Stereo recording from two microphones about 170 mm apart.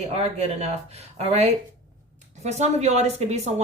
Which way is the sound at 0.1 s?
40° right (ahead or behind).